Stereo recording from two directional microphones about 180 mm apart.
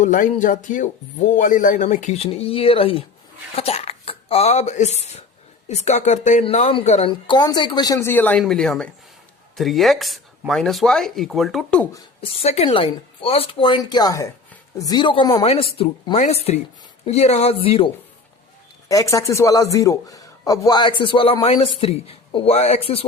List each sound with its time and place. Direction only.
0.0 s a man's voice: 45° left (ahead or behind); by 11.9 s 5° left (ahead or behind)
12.2 s a man's voice: 35° left (ahead or behind)
18.9 s a man's voice: 20° left (ahead or behind); by 23.0 s 35° left (ahead or behind)